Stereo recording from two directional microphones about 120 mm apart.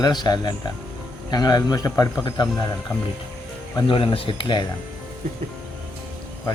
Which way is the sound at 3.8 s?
50° left (ahead or behind).